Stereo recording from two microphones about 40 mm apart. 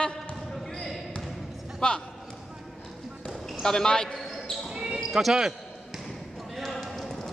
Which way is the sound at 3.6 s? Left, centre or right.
Centre.